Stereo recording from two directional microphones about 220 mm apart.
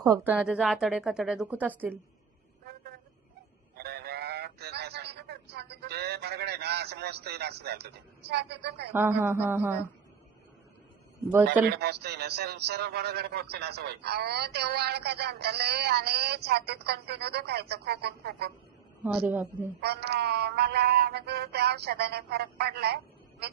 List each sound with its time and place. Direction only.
0.0 s speech: 15° right (ahead or behind)
0.3 s a woman's voice: 5° right (ahead or behind)
3.8 s a sound: 45° right (ahead or behind)
8.9 s speech: 10° right (ahead or behind)
11.7 s a man's voice: 50° right (ahead or behind)
19.0 s speech: 5° right (ahead or behind)
19.8 s a man's voice: 45° right (ahead or behind)